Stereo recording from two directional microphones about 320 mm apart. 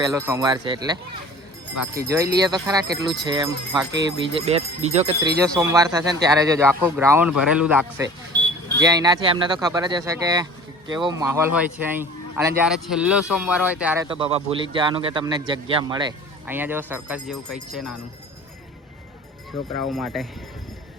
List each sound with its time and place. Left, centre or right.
0.0 s speech: centre
2.0 s speech: centre
5.4 s speech: centre
19.9 s speech: centre